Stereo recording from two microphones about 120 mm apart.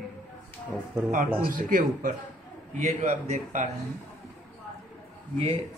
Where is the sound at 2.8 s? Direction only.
80° right.